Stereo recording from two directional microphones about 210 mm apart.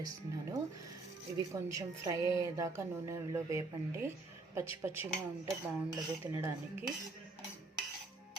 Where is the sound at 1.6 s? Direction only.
15° right (ahead or behind).